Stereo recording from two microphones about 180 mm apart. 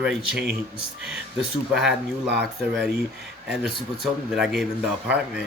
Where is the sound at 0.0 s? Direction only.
5° right (ahead or behind).